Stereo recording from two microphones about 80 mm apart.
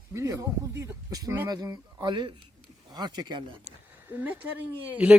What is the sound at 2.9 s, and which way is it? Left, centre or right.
Speech, right.